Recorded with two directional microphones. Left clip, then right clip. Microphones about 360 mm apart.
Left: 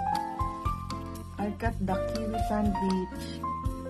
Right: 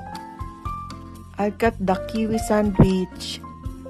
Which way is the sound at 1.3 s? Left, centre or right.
Right.